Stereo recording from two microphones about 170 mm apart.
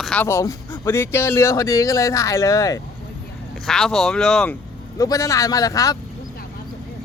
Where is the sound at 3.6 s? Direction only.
Centre (ahead or behind).